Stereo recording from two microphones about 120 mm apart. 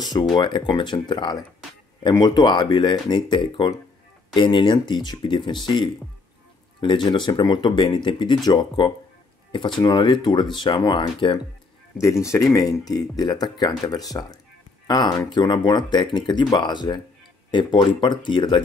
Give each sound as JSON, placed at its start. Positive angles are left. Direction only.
{"t": 0.0, "sound": "speech", "side_deg": 35}
{"t": 12.0, "sound": "speech", "side_deg": 25}